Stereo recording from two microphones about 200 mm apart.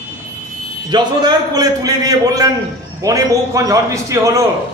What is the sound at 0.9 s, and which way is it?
A man's voice, 20° right (ahead or behind).